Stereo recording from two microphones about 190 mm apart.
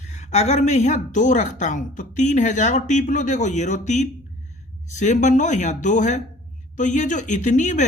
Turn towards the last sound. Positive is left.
turn(degrees=40)  # may be behind; listen again after turning